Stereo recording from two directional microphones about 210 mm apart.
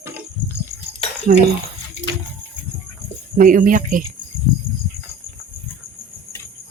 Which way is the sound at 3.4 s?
40° right (ahead or behind).